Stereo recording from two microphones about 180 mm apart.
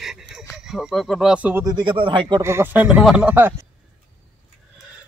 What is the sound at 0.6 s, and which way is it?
Speech, 5° right (ahead or behind).